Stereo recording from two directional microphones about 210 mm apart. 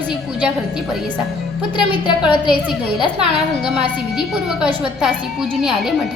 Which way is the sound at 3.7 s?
5° right (ahead or behind).